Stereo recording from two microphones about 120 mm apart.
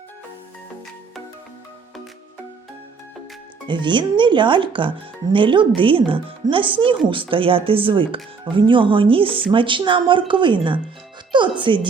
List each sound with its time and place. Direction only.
3.7 s speech: 40° right (ahead or behind)